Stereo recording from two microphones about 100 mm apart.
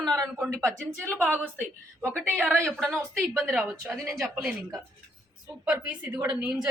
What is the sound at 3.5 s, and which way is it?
A woman's voice, 5° right (ahead or behind).